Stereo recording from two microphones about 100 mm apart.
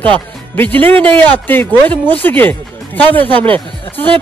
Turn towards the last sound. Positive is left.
turn(degrees=15)  # may be behind; listen again after turning